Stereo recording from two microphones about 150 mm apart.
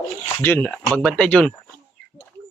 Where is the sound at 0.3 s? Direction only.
15° left (ahead or behind).